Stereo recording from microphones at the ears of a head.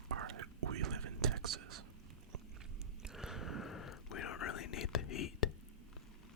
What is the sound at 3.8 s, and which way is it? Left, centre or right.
Whispering, left.